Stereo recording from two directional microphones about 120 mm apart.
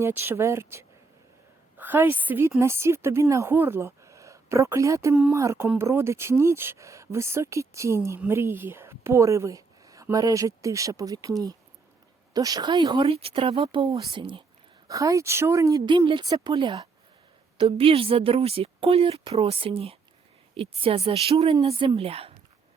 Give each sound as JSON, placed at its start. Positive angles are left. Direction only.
{"t": 0.0, "sound": "a woman's voice", "side_deg": -20}
{"t": 14.8, "sound": "a woman's voice", "side_deg": -30}
{"t": 15.9, "sound": "a woman's voice", "side_deg": -40}